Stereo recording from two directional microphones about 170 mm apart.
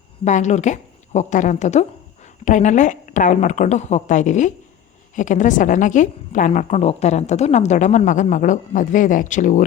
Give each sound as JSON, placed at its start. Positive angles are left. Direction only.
{"t": 0.3, "sound": "a woman's voice", "side_deg": 45}